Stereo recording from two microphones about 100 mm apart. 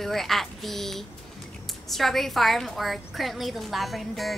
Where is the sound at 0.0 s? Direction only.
Centre (ahead or behind).